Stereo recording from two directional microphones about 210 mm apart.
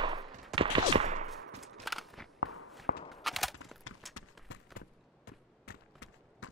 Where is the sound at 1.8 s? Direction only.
Centre (ahead or behind).